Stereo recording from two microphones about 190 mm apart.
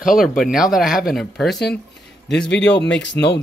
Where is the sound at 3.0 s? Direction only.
65° left (ahead or behind).